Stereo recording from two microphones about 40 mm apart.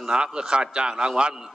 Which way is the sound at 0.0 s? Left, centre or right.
Right.